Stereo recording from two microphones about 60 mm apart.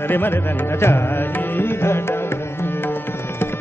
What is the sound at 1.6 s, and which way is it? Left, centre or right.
Music, left.